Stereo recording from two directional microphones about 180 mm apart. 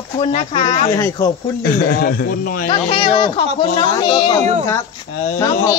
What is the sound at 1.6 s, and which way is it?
Speech, 60° left (ahead or behind).